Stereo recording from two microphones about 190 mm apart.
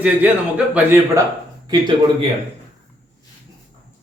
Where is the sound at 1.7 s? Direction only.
25° right (ahead or behind).